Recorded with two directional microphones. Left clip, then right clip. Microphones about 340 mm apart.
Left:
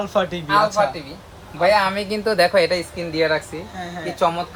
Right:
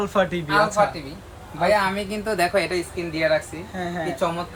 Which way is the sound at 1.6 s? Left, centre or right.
Centre.